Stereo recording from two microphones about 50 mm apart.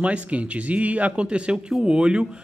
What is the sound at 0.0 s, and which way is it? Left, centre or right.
Speech, right.